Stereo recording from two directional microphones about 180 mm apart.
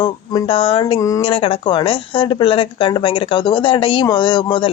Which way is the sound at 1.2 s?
30° left (ahead or behind).